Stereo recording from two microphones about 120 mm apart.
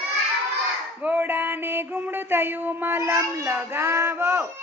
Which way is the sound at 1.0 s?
15° right (ahead or behind).